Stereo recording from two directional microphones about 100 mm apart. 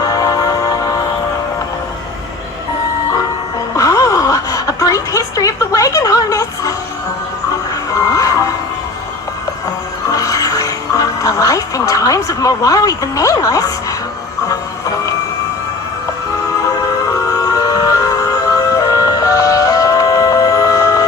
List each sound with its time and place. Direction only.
0.0 s music: 40° left (ahead or behind)
3.8 s gasp: 35° left (ahead or behind)
8.0 s music: 35° left (ahead or behind)
10.1 s music: 35° left (ahead or behind)
17.3 s music: 35° left (ahead or behind)